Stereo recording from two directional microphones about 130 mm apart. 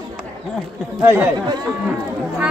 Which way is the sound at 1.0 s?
15° right (ahead or behind).